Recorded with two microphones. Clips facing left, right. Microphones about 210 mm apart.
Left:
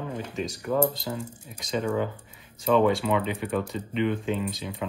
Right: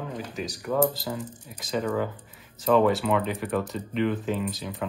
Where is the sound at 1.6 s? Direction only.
5° right (ahead or behind).